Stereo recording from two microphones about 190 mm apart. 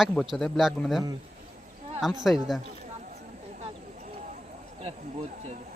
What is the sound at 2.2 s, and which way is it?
Speech, centre (ahead or behind).